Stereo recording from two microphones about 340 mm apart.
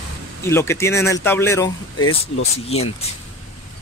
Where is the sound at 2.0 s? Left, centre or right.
Left.